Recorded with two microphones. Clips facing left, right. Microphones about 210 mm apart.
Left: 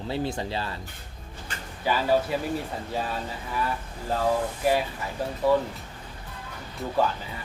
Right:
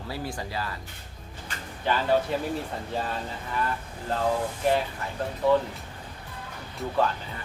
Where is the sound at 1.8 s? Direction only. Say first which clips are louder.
Left 1 dB; 5° left (ahead or behind).